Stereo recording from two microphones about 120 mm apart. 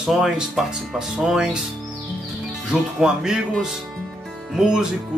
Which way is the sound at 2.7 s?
5° right (ahead or behind).